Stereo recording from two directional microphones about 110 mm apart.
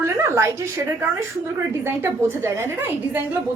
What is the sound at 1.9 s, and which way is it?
A woman's voice, 25° right (ahead or behind).